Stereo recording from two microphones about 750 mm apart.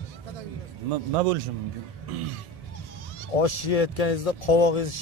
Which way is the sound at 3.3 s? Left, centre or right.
Left.